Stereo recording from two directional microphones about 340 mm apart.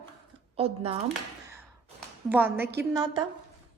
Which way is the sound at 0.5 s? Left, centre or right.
Centre.